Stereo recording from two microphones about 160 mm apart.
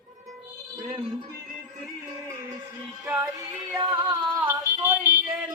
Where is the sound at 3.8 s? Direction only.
30° right (ahead or behind).